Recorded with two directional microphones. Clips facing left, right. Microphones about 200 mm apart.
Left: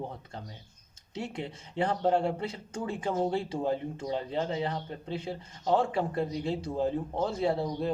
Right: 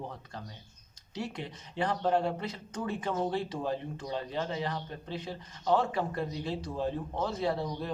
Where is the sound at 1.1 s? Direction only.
25° left (ahead or behind).